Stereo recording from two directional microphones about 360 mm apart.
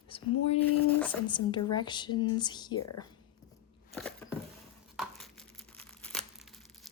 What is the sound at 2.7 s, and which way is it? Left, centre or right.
Speech, left.